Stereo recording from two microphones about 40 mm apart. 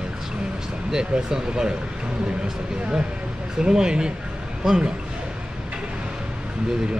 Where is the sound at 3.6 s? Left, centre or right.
Right.